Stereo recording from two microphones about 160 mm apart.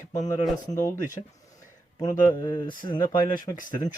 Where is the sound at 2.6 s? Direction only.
30° left (ahead or behind).